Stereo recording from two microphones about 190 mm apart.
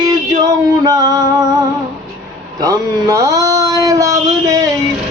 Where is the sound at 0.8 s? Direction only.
20° right (ahead or behind).